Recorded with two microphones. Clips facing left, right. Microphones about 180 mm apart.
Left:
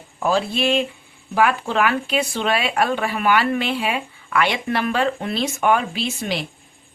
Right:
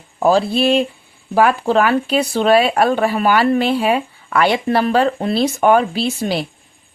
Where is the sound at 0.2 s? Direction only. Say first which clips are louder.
Right 6 dB; 35° right (ahead or behind).